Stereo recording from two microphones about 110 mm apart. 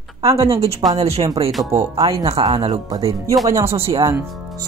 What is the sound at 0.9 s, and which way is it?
Speech, 70° right (ahead or behind).